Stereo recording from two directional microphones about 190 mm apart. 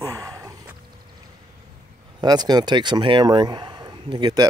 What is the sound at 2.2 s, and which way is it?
Speech, 20° right (ahead or behind).